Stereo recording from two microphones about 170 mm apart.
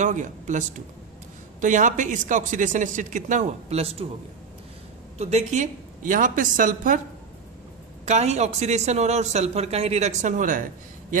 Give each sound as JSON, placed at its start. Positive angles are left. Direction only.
{"t": 0.0, "sound": "a man's voice", "side_deg": -45}
{"t": 5.1, "sound": "a man's voice", "side_deg": -40}
{"t": 8.0, "sound": "speech", "side_deg": -40}